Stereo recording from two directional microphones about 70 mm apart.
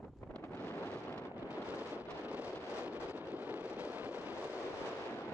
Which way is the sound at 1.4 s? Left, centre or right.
Right.